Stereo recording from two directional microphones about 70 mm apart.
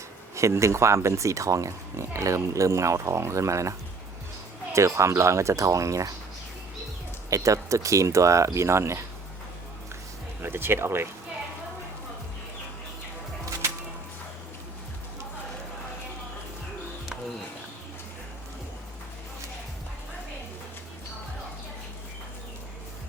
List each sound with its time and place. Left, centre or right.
0.3 s speech: right
7.3 s speech: right
10.4 s speech: right